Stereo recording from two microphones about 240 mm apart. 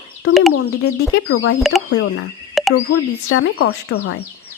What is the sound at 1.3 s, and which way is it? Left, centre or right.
Speech, left.